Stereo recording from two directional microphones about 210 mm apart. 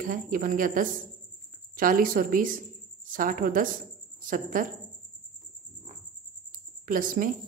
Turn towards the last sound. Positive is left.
turn(degrees=-40)  # may be behind; listen again after turning